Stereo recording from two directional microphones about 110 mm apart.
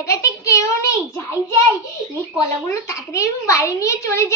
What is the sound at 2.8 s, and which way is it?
A child's voice, 30° left (ahead or behind).